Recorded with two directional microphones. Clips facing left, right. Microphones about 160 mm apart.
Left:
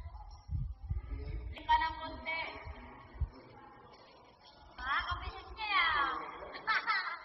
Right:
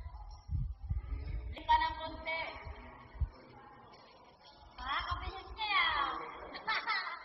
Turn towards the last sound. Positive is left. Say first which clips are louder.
# left 1 dB
turn(degrees=-25)  # may be behind; listen again after turning